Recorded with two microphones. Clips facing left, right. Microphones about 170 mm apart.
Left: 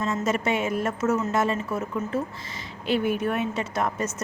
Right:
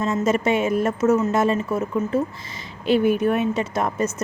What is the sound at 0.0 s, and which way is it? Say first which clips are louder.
A woman's voice: right 5 dB; 20° right (ahead or behind).